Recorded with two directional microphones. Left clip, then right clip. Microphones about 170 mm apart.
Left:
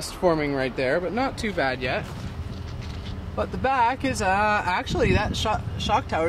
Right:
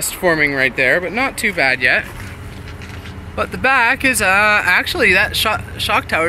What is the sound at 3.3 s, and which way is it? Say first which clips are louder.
Speech: right 9 dB; centre (ahead or behind).